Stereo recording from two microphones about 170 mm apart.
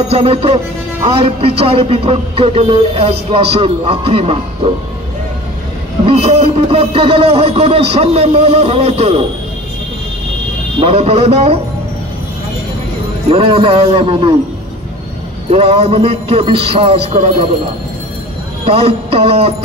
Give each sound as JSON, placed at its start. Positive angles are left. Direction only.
{"t": 0.1, "sound": "speech", "side_deg": -35}
{"t": 6.0, "sound": "speech", "side_deg": -35}
{"t": 10.8, "sound": "speech", "side_deg": -35}
{"t": 13.3, "sound": "speech", "side_deg": -30}
{"t": 15.5, "sound": "speech", "side_deg": -35}
{"t": 18.7, "sound": "speech", "side_deg": -35}